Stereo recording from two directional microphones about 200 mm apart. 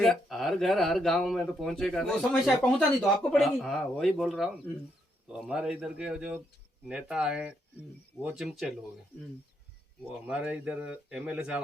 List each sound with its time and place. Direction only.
0.0 s speech: centre (ahead or behind)
10.2 s speech: 5° right (ahead or behind)